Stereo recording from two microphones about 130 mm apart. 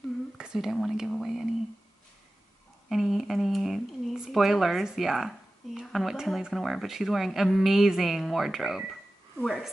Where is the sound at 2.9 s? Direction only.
Centre (ahead or behind).